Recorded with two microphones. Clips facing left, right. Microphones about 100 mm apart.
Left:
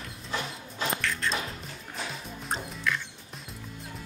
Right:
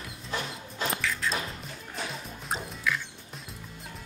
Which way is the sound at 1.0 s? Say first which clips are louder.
Even; centre (ahead or behind).